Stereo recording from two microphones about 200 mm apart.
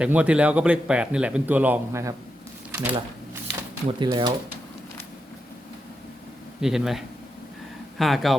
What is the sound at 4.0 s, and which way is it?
Speech, 20° right (ahead or behind).